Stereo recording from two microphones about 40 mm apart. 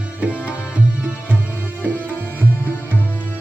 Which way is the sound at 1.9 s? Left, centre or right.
Right.